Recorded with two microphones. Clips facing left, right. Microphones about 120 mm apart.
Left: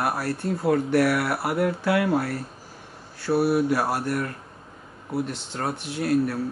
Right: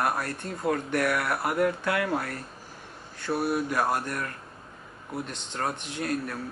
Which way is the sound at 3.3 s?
70° left (ahead or behind).